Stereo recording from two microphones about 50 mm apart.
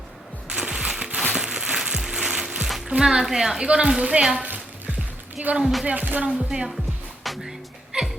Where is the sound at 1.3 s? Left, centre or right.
Centre.